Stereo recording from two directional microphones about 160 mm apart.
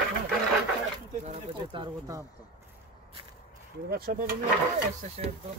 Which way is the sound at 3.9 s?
75° right (ahead or behind).